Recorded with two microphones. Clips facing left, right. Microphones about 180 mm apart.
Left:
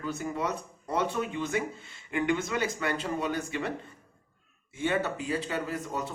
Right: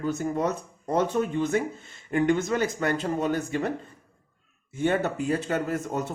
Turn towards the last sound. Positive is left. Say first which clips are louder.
# right 5 dB
turn(degrees=-50)  # may be behind; listen again after turning